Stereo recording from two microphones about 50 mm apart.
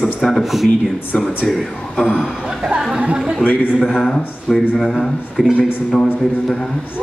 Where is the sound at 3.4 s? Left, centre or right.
Left.